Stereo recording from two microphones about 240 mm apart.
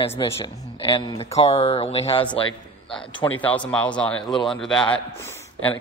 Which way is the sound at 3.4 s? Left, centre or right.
Centre.